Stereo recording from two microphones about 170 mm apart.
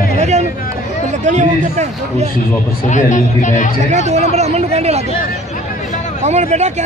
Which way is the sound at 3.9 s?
45° right (ahead or behind).